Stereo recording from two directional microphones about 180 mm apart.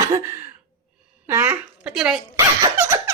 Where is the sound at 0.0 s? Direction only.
15° right (ahead or behind).